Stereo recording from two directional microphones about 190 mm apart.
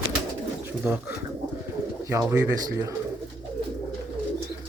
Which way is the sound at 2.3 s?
20° right (ahead or behind).